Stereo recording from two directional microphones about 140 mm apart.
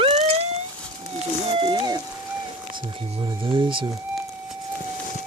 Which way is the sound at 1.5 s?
35° right (ahead or behind).